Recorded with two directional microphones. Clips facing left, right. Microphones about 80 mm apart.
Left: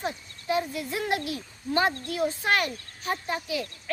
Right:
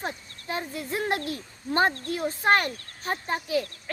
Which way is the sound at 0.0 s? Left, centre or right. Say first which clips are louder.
Left 1 dB; right.